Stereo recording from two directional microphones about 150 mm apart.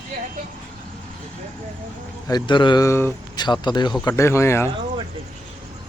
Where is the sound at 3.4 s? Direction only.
30° left (ahead or behind).